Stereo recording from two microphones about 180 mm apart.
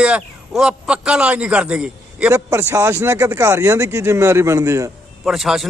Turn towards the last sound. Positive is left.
turn(degrees=0)  # may be behind; listen again after turning